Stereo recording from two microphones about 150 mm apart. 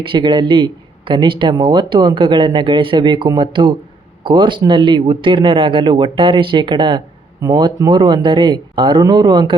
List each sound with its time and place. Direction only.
0.0 s speech: 35° right (ahead or behind)